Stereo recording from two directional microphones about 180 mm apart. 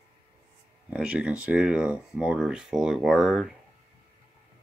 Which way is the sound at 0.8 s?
5° right (ahead or behind).